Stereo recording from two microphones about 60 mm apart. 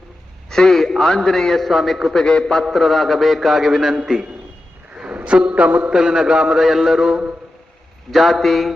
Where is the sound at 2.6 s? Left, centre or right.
Centre; by 5.9 s right.